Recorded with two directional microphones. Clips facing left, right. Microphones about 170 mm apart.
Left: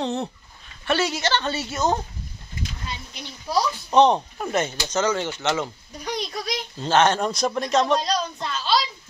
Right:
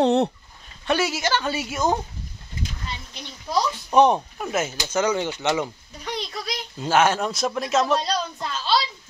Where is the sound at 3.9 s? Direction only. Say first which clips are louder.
Even; 10° right (ahead or behind).